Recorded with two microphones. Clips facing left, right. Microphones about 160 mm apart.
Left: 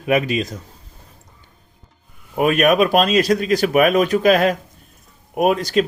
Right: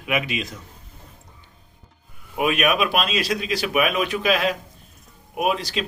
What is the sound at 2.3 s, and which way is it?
Speech, 45° left (ahead or behind).